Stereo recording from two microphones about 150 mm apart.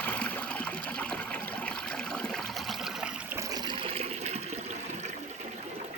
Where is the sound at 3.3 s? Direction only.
25° right (ahead or behind); by 5.5 s 50° right (ahead or behind).